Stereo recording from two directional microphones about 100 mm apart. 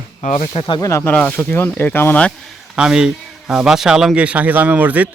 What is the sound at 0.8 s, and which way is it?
Speech, 30° left (ahead or behind).